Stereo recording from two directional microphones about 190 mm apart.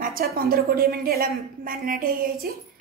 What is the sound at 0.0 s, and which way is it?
A woman's voice, 50° right (ahead or behind).